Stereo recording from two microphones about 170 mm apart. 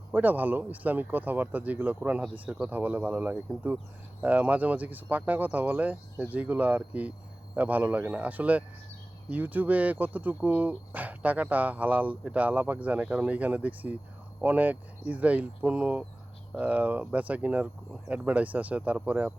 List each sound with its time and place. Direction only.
0.1 s speech: 10° right (ahead or behind)